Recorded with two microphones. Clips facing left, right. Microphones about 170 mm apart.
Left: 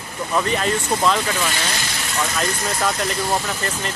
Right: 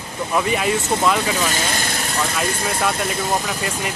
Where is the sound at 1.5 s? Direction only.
50° right (ahead or behind).